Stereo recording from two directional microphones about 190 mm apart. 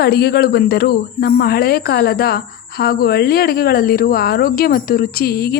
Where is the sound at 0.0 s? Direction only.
55° left (ahead or behind).